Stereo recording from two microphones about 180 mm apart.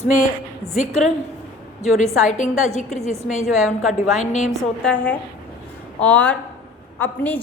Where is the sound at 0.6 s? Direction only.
15° right (ahead or behind).